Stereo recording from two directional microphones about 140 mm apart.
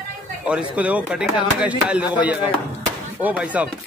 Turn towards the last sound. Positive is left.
turn(degrees=-10)  # may be behind; listen again after turning